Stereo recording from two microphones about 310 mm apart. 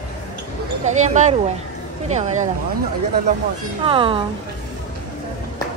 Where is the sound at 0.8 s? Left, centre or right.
Right.